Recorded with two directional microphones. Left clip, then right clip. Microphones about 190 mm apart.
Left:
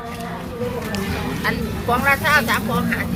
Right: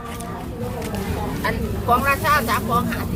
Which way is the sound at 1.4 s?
75° right (ahead or behind).